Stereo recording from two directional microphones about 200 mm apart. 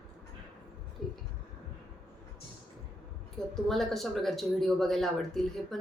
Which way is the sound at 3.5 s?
Centre (ahead or behind).